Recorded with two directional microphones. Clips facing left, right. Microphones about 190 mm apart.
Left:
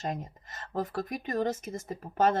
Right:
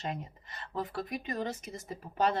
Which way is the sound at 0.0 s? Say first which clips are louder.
Left 3 dB; 45° left (ahead or behind).